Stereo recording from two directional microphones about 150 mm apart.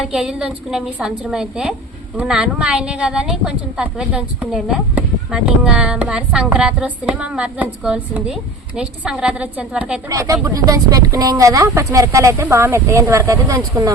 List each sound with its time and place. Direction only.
0.0 s a woman's voice: 5° right (ahead or behind)
10.1 s speech: 20° right (ahead or behind)